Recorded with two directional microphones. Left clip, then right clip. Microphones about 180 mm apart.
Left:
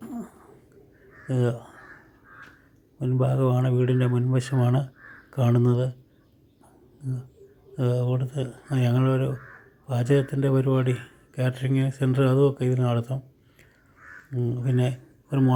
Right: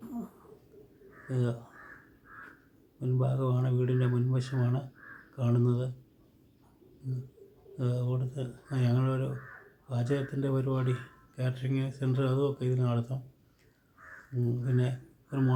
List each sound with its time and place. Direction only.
0.0 s a sound: 35° left (ahead or behind)
1.3 s speech: 35° left (ahead or behind)
3.0 s speech: 35° left (ahead or behind)
7.8 s speech: 35° left (ahead or behind)
14.3 s speech: 30° left (ahead or behind)